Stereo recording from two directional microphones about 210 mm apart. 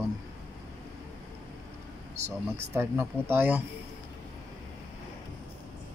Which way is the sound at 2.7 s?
10° right (ahead or behind).